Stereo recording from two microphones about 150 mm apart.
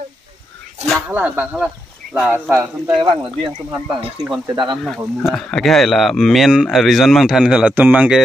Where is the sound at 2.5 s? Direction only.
20° right (ahead or behind).